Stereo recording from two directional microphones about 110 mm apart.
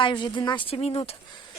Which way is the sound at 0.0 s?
45° left (ahead or behind).